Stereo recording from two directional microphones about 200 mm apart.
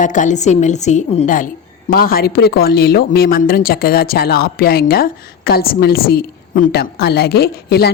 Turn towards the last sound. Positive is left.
turn(degrees=50)  # may be behind; listen again after turning